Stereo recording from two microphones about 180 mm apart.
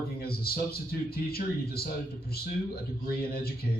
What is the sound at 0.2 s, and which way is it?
Speech, 55° left (ahead or behind).